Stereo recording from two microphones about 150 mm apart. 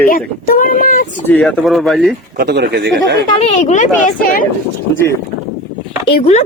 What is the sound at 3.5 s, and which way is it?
Speech, 50° left (ahead or behind).